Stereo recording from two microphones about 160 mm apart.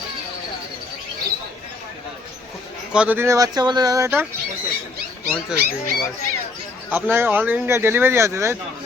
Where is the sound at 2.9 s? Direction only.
10° right (ahead or behind).